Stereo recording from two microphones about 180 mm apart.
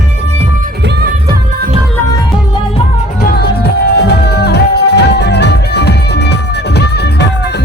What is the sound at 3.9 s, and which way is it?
Music, 65° left (ahead or behind).